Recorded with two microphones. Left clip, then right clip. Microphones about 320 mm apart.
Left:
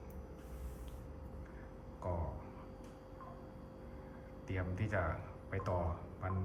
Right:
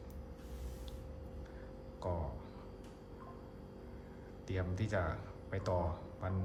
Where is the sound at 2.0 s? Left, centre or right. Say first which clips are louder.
Right 1 dB; centre.